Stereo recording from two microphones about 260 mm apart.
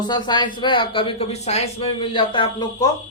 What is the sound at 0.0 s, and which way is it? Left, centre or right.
Speech, centre.